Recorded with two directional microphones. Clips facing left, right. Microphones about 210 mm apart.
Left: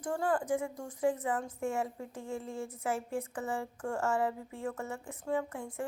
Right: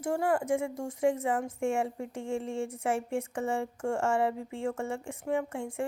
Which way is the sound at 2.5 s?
25° right (ahead or behind).